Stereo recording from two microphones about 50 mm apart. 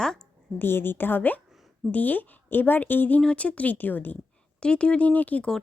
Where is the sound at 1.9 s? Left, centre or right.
Left.